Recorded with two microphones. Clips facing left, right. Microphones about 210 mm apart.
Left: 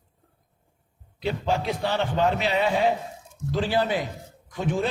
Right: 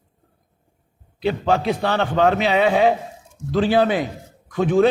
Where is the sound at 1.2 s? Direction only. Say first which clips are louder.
Right 6 dB; 70° right (ahead or behind).